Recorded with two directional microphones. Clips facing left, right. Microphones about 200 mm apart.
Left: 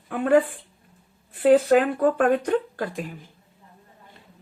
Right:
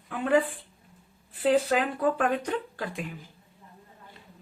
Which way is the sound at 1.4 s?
50° left (ahead or behind).